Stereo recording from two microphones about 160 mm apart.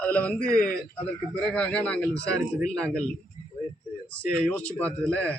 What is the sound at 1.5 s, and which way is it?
A man's voice, 5° left (ahead or behind).